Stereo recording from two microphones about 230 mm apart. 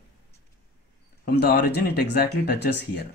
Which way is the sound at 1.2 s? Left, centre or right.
Left.